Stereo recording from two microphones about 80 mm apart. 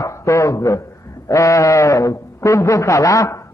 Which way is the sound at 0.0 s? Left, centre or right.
Left.